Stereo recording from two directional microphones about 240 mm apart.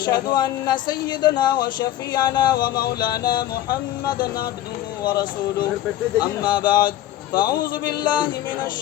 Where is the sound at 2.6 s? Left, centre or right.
Left.